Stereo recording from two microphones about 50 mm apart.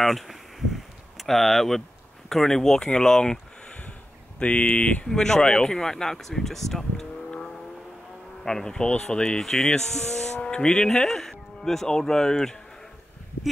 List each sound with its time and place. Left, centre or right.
0.0 s a sound: centre
2.2 s speech: centre
4.4 s speech: left
5.0 s speech: centre
7.2 s vehicle: centre
8.5 s speech: centre